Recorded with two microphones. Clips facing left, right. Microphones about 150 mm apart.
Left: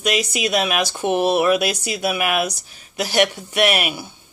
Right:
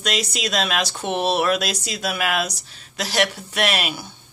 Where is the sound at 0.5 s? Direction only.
15° left (ahead or behind).